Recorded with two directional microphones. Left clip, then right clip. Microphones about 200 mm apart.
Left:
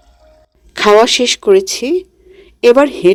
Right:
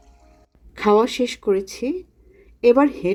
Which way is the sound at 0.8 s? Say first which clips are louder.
Left 9 dB; 55° left (ahead or behind).